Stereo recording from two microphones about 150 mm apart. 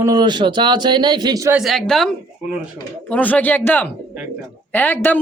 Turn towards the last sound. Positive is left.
turn(degrees=15)  # may be behind; listen again after turning